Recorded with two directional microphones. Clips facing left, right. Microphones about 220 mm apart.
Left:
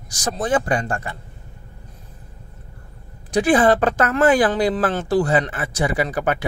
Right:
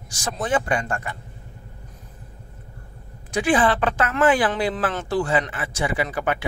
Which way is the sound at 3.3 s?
40° left (ahead or behind).